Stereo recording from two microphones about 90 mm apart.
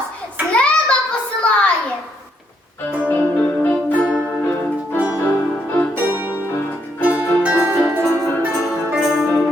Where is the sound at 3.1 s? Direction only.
20° left (ahead or behind).